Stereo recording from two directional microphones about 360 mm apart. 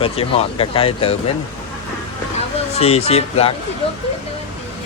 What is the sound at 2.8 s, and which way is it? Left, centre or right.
Speech, centre.